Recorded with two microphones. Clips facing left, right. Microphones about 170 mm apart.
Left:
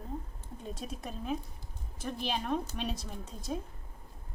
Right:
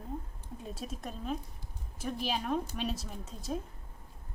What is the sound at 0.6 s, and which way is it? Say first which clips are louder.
Speech: even; centre (ahead or behind).